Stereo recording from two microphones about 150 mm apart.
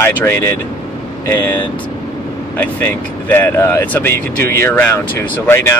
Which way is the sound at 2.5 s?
15° left (ahead or behind).